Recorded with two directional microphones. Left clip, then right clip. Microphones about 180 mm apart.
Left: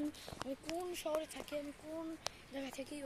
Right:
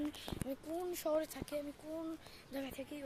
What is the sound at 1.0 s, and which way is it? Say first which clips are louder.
Speech: right 3 dB; 30° right (ahead or behind).